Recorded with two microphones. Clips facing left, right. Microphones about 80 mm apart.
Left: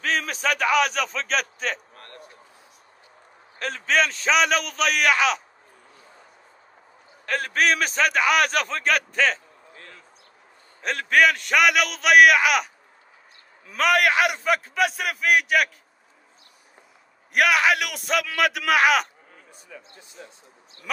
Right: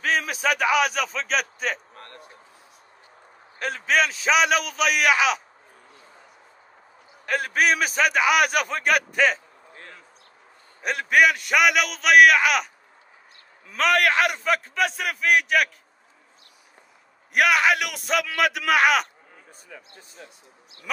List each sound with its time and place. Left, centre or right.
0.0 s a man's voice: centre
2.0 s a sound: right
3.5 s a man's voice: centre
7.2 s a man's voice: centre
10.8 s a man's voice: centre
13.7 s a man's voice: centre
17.3 s a man's voice: centre
19.7 s speech: right